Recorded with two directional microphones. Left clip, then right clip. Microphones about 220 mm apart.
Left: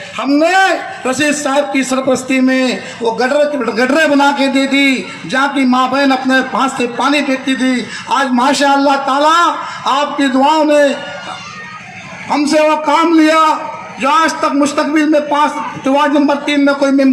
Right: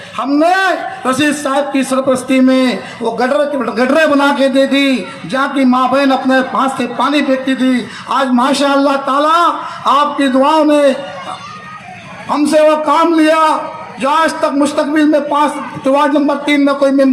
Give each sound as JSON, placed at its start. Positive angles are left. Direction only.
{"t": 0.2, "sound": "a man's voice", "side_deg": -50}
{"t": 12.3, "sound": "a man's voice", "side_deg": -50}